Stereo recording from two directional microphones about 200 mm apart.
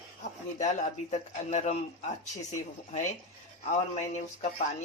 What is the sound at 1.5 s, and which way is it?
Speech, 35° left (ahead or behind).